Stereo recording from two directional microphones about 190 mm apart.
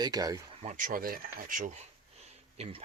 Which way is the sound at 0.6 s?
40° right (ahead or behind).